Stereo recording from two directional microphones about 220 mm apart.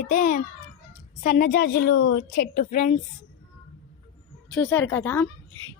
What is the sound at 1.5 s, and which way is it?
Speech, 45° left (ahead or behind).